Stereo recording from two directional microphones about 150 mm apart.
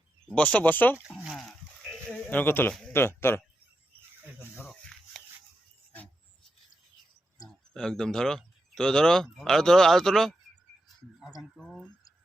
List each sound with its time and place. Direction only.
0.3 s speech: 10° left (ahead or behind)
1.1 s sheep: centre (ahead or behind)
2.9 s speech: 15° left (ahead or behind)
7.4 s speech: 5° left (ahead or behind)
11.5 s speech: centre (ahead or behind)